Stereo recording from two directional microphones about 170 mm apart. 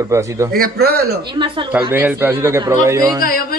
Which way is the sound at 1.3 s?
30° right (ahead or behind).